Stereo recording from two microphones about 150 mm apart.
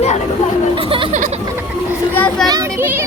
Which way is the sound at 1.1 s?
55° right (ahead or behind).